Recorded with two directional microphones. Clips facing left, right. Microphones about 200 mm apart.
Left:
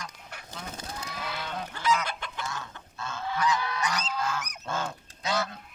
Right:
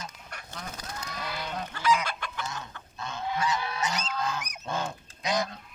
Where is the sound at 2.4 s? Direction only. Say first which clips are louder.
Left 1 dB; 20° right (ahead or behind).